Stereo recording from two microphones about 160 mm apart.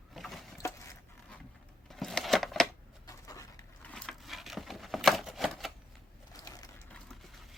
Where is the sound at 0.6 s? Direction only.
15° left (ahead or behind).